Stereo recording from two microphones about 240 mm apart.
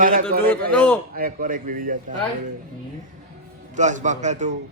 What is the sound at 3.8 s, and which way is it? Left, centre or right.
Speech, right.